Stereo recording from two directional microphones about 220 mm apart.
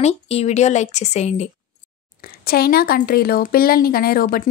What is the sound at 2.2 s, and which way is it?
A woman's voice, 45° left (ahead or behind).